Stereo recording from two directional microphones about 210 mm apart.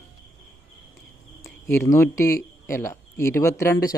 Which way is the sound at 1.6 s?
15° left (ahead or behind).